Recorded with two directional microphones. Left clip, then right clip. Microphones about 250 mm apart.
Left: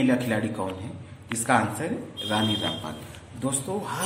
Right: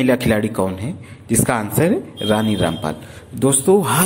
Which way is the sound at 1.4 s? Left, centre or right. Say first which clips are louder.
Right 4 dB; right.